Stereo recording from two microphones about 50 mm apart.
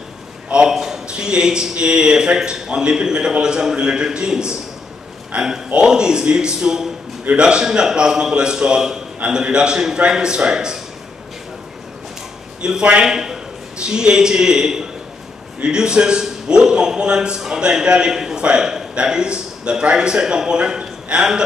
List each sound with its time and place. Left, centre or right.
0.5 s a man's voice: centre
0.7 s a sound: centre
1.0 s a man's voice: centre
12.6 s a man's voice: centre